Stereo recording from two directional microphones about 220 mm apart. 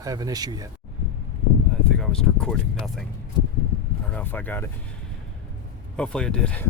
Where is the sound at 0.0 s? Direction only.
15° right (ahead or behind).